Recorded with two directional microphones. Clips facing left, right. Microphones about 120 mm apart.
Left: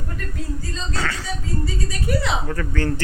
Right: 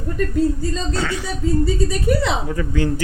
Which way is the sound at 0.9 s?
15° right (ahead or behind).